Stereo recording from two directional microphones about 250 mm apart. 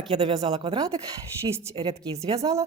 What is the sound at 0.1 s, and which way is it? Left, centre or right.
A woman's voice, right.